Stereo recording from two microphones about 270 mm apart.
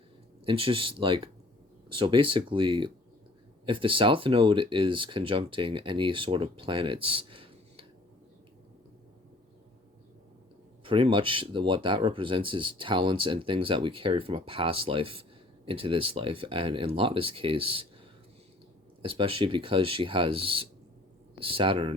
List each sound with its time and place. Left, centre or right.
0.4 s speech: centre
10.8 s speech: centre
19.0 s speech: centre